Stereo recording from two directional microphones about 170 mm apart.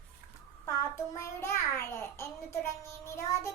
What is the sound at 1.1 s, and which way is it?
A child's voice, 15° left (ahead or behind).